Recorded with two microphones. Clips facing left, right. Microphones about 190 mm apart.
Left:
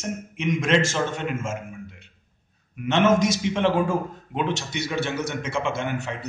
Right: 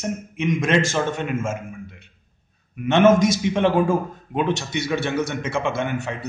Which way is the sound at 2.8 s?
55° right (ahead or behind).